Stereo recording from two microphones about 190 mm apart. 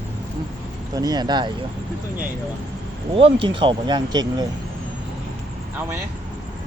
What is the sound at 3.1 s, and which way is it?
Speech, 30° right (ahead or behind).